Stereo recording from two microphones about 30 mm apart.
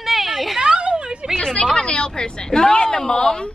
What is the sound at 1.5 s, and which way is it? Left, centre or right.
A woman's voice, left.